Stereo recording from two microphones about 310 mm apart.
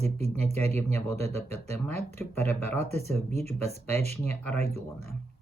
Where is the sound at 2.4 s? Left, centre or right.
Centre.